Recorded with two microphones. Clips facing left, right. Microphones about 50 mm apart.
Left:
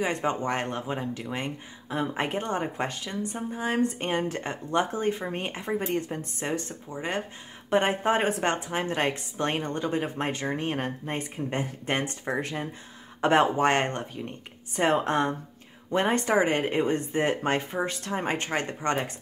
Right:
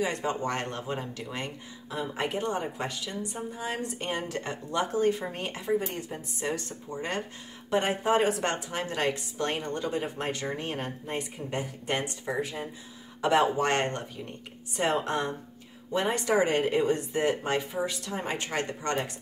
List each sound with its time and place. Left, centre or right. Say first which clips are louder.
0.0 s speech: left 2 dB; left
1.9 s a woman's voice: left 3 dB; left
6.9 s speech: left 1 dB; centre
7.7 s a woman's voice: left 2 dB; left
13.2 s a woman's voice: left 3 dB; left